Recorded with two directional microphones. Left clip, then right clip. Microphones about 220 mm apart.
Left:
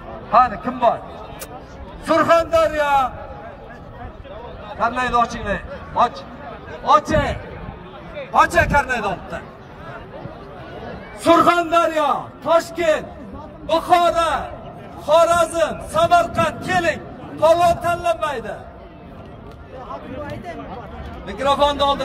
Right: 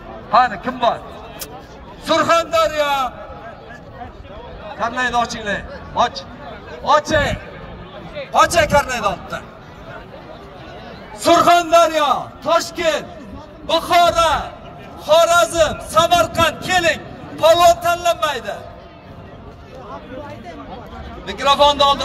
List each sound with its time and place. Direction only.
0.3 s a man's voice: 5° right (ahead or behind)
2.0 s a man's voice: centre (ahead or behind)
4.7 s a man's voice: centre (ahead or behind)
8.2 s a man's voice: 30° right (ahead or behind)
11.2 s a man's voice: 50° right (ahead or behind)
12.7 s a man's voice: 5° left (ahead or behind)
13.7 s a man's voice: 35° right (ahead or behind)
21.3 s a man's voice: 30° right (ahead or behind)